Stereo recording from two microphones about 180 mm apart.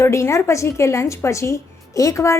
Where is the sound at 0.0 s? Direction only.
15° left (ahead or behind).